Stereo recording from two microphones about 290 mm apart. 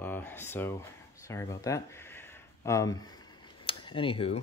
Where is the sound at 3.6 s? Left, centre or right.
Centre.